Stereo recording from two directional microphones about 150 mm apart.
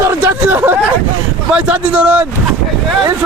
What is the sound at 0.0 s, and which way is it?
Hubbub, 15° right (ahead or behind).